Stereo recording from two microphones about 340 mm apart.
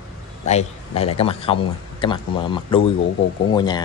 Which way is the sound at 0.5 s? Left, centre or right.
Centre.